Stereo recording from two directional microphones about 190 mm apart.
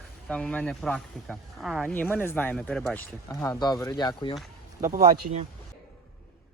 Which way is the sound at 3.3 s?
15° left (ahead or behind).